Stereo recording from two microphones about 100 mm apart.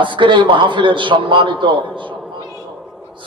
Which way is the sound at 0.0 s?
55° right (ahead or behind).